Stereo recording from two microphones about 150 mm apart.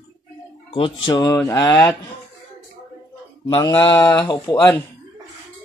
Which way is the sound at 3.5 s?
30° left (ahead or behind).